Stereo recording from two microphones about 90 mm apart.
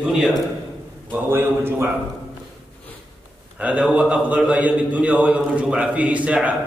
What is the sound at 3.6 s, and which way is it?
A man's voice, 15° right (ahead or behind).